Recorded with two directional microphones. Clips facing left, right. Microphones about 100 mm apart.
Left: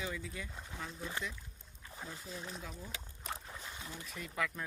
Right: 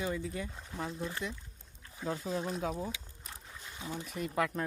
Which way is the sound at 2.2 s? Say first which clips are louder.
Right 12 dB; 45° right (ahead or behind).